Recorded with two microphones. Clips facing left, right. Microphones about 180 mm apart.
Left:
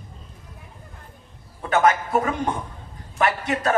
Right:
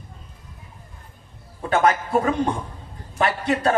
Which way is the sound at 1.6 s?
30° right (ahead or behind).